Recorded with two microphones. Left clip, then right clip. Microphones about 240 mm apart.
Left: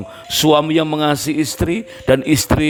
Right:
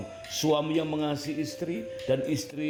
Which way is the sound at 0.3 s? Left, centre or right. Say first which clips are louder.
Left 13 dB; left.